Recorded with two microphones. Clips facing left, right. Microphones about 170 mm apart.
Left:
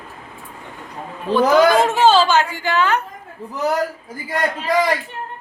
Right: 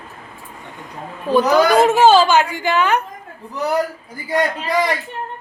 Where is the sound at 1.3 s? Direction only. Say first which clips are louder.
Even; 10° right (ahead or behind).